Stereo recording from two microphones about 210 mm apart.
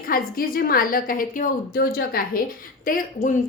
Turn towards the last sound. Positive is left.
turn(degrees=40)  # may be behind; listen again after turning